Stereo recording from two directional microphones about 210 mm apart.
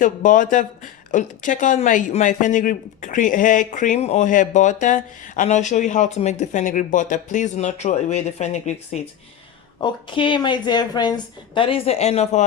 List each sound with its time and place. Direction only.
0.0 s speech: 40° left (ahead or behind)
9.8 s speech: 25° left (ahead or behind)